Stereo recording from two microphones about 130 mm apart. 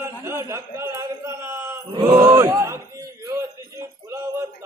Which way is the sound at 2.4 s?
20° right (ahead or behind).